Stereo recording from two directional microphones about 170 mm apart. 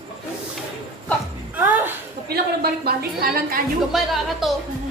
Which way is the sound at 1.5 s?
10° right (ahead or behind).